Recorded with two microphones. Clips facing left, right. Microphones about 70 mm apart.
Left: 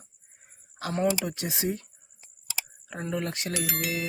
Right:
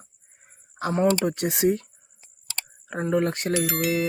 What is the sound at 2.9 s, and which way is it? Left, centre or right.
Speech, right.